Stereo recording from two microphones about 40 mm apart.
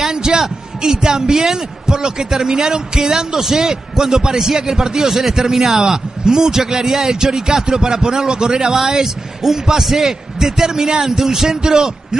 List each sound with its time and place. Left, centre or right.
0.0 s a man's voice: centre